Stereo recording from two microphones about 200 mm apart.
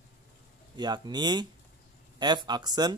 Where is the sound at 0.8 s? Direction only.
20° right (ahead or behind).